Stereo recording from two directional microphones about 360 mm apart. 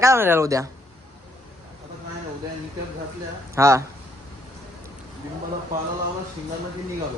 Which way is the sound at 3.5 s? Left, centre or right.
Centre.